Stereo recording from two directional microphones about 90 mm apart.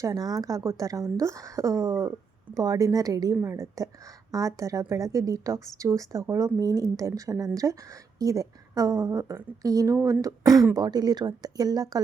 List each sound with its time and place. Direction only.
0.0 s a woman's voice: 45° right (ahead or behind)
3.4 s a woman's voice: 30° right (ahead or behind)